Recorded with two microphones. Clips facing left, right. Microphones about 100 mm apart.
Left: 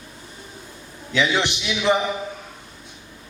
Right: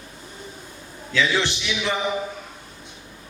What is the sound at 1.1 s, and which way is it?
Speech, 20° left (ahead or behind).